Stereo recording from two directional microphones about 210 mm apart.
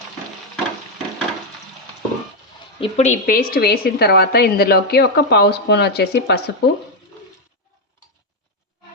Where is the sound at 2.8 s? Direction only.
35° left (ahead or behind); by 6.4 s 50° left (ahead or behind).